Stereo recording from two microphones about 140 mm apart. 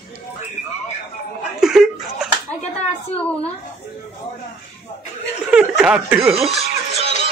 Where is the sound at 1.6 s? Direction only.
5° right (ahead or behind).